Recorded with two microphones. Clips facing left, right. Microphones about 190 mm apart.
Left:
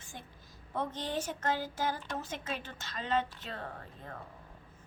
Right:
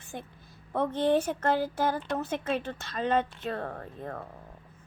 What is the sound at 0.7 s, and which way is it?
Speech, 60° right (ahead or behind).